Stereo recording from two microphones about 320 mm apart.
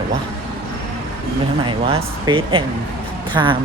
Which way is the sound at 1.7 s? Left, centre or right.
Centre.